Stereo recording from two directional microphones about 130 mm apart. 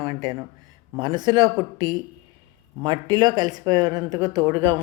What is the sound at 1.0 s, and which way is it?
Speech, 35° right (ahead or behind).